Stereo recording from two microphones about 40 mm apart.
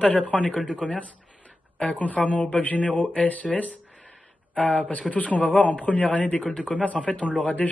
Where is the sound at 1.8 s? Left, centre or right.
Left.